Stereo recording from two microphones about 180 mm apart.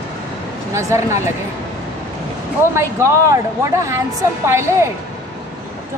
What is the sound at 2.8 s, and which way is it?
A woman's voice, 15° right (ahead or behind).